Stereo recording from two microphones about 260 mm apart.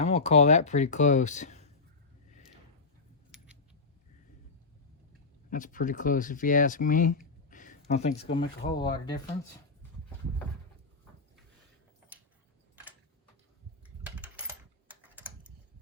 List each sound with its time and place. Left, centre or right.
0.0 s speech: left
3.3 s keys jangling: centre
5.5 s speech: left
14.0 s typing: centre